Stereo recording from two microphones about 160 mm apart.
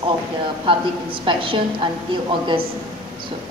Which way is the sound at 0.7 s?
35° right (ahead or behind).